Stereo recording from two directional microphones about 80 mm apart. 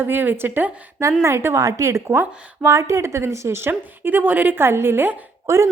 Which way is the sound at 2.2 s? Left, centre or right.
Right.